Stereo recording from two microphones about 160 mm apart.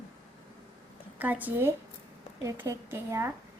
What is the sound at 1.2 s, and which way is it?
A woman's voice, 10° right (ahead or behind).